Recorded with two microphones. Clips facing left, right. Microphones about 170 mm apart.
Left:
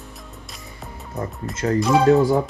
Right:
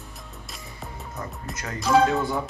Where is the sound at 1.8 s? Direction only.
Centre (ahead or behind).